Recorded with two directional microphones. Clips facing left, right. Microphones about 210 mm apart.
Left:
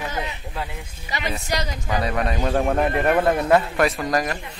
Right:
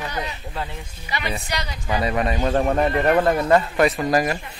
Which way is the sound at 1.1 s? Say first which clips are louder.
Left 1 dB; 40° left (ahead or behind).